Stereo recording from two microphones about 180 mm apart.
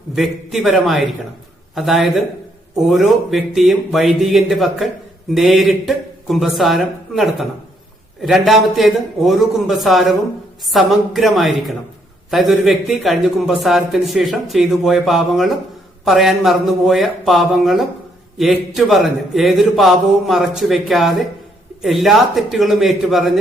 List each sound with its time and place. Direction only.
0.1 s a man's voice: centre (ahead or behind)